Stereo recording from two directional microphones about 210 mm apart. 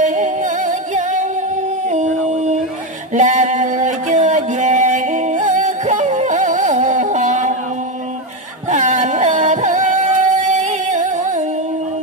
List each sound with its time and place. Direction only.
0.0 s music: 35° right (ahead or behind)
1.9 s howl: 35° right (ahead or behind)
3.2 s a sound: 35° right (ahead or behind)
8.6 s music: 35° right (ahead or behind)